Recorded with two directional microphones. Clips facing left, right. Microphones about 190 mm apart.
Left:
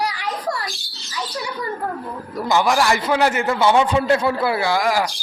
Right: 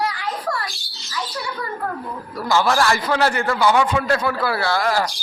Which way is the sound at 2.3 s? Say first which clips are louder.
Left 1 dB; 20° left (ahead or behind).